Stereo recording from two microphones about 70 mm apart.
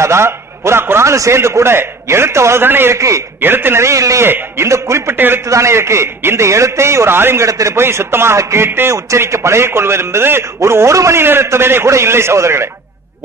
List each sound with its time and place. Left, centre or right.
0.0 s a man's voice: right
3.0 s a man's voice: right
3.3 s a man's voice: right
5.1 s a man's voice: right
5.5 s a man's voice: right
7.4 s a man's voice: right
8.9 s a man's voice: right